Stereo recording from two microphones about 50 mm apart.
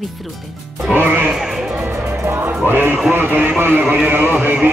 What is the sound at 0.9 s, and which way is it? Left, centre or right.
Speech, right.